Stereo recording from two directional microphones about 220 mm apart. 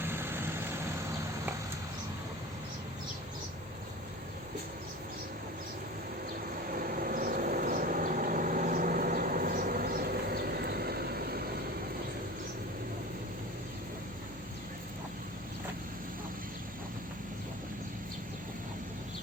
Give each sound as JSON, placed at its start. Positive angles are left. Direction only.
{"t": 0.0, "sound": "vehicle", "side_deg": -10}
{"t": 6.7, "sound": "vehicle", "side_deg": -40}